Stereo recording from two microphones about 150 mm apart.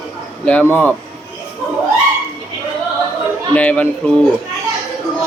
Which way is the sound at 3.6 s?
10° left (ahead or behind).